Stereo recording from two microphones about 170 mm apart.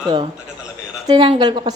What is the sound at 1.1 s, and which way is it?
Speech, 30° right (ahead or behind).